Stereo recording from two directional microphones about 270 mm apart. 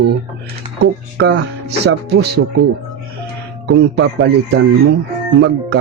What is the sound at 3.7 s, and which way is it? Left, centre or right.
Speech, right.